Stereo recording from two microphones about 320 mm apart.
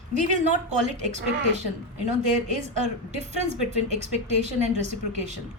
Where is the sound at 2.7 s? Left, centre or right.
Right.